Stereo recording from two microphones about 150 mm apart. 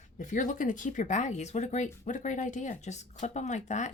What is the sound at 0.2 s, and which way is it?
Speech, 60° left (ahead or behind).